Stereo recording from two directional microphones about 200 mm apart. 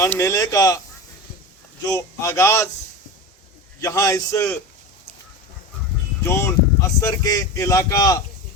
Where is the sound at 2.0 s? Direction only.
15° left (ahead or behind).